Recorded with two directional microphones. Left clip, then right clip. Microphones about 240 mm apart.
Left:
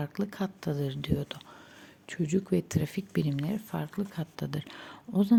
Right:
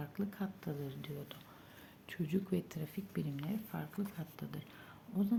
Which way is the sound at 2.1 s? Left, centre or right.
Left.